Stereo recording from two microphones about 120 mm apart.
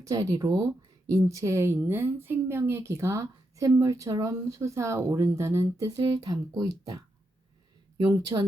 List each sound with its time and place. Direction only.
0.1 s speech: 30° right (ahead or behind)
6.0 s speech: 35° right (ahead or behind)